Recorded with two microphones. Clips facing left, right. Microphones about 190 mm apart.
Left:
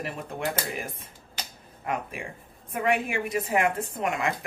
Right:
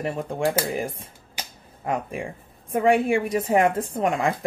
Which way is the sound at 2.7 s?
30° right (ahead or behind).